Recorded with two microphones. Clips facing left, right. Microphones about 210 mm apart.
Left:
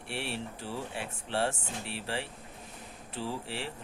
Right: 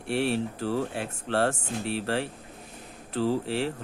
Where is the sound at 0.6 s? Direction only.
90° right.